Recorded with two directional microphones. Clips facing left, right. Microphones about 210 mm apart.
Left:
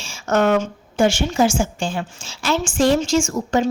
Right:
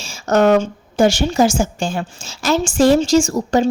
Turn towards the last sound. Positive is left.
turn(degrees=-35)  # may be behind; listen again after turning